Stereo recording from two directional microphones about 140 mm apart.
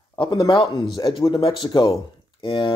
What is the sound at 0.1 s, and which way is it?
Speech, 30° left (ahead or behind).